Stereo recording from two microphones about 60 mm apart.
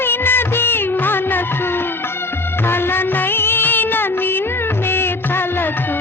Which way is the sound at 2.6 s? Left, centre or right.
Left.